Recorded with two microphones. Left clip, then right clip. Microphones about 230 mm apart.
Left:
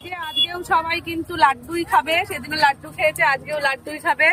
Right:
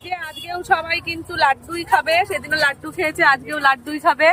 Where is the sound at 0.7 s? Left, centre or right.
Centre.